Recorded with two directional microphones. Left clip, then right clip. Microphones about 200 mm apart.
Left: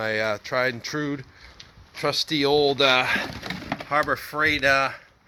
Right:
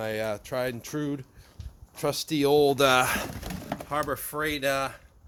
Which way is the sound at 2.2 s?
20° right (ahead or behind).